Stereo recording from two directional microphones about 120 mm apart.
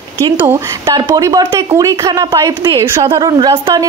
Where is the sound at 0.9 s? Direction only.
35° right (ahead or behind).